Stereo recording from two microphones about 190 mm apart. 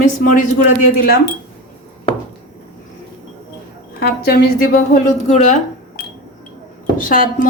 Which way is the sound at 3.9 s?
55° left (ahead or behind).